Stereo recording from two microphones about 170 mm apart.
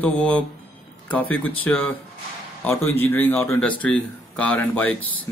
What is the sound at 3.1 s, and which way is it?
Speech, 10° left (ahead or behind).